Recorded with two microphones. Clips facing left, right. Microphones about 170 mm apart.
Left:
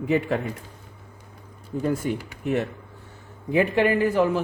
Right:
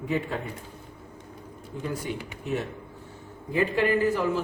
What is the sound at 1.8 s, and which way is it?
Speech, 50° left (ahead or behind).